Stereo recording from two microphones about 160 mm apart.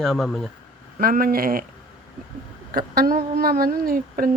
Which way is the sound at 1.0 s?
65° right (ahead or behind).